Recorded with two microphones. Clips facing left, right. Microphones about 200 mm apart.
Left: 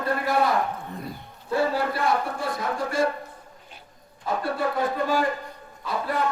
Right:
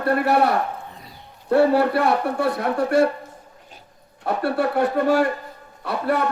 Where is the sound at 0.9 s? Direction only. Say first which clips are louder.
Left 9 dB; 55° left (ahead or behind).